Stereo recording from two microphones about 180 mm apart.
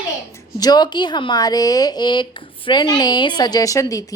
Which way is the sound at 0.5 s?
20° left (ahead or behind).